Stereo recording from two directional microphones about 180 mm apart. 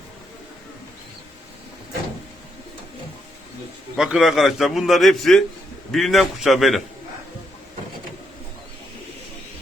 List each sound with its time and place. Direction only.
3.9 s a man's voice: 5° right (ahead or behind)